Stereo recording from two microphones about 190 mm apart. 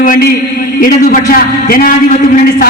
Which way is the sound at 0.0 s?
45° left (ahead or behind).